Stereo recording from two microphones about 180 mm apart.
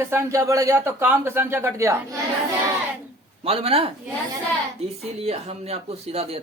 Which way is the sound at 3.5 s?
35° right (ahead or behind).